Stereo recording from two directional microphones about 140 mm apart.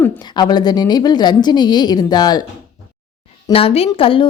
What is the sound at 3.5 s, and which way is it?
Speech, 45° left (ahead or behind).